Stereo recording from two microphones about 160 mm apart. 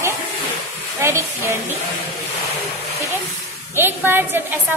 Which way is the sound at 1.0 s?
15° right (ahead or behind).